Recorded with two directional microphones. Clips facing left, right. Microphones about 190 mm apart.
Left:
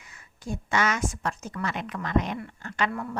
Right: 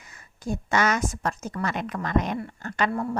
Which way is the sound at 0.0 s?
40° right (ahead or behind).